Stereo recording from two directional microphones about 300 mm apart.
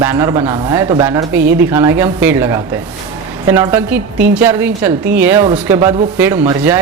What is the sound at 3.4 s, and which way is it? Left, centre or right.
A woman's voice, centre.